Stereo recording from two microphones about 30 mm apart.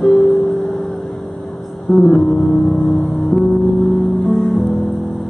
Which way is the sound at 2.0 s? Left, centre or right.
Centre.